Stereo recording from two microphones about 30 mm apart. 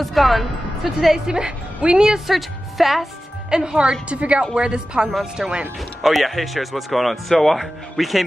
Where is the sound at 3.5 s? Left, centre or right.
Right.